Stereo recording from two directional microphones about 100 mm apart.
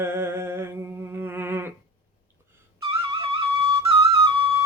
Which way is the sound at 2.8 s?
65° right (ahead or behind).